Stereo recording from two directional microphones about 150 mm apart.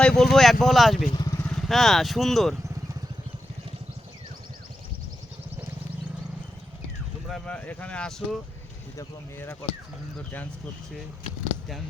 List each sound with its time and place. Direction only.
0.0 s speech: 5° left (ahead or behind)
1.1 s vehicle: 25° left (ahead or behind)
1.4 s speech: 5° left (ahead or behind)
7.3 s speech: 5° left (ahead or behind)
9.0 s speech: 20° left (ahead or behind)